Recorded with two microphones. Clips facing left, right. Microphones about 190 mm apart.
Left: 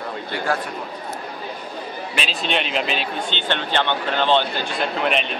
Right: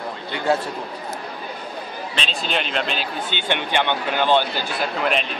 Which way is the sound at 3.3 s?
15° right (ahead or behind).